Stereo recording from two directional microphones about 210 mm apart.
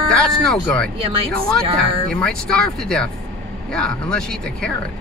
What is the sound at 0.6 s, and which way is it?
Speech, 5° left (ahead or behind).